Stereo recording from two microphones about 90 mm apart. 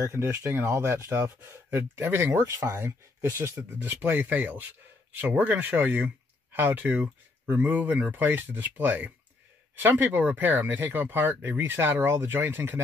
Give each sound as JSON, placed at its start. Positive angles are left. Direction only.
{"t": 0.0, "sound": "speech", "side_deg": -30}